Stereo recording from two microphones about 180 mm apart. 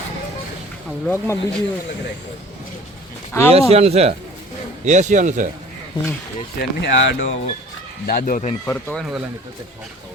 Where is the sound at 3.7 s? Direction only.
35° right (ahead or behind).